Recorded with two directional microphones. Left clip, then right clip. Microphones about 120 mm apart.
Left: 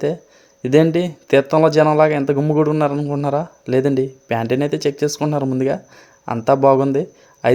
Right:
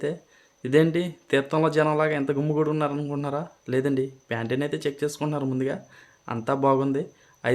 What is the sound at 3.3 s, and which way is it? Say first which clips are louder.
Speech: left 9 dB; 50° left (ahead or behind).